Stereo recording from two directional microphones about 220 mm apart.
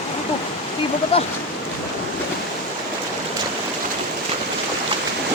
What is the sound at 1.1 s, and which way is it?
Speech, 25° left (ahead or behind).